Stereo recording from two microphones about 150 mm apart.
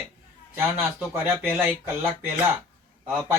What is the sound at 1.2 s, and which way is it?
Speech, 15° right (ahead or behind).